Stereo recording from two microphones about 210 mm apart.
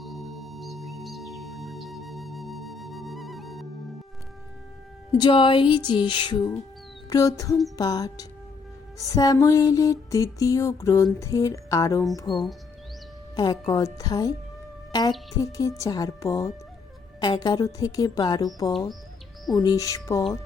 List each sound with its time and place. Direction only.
0.0 s music: centre (ahead or behind)
5.1 s music: 25° left (ahead or behind)
12.3 s speech: centre (ahead or behind)
13.3 s music: 20° left (ahead or behind)